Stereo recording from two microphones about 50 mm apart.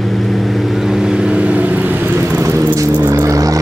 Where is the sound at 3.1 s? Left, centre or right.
Right.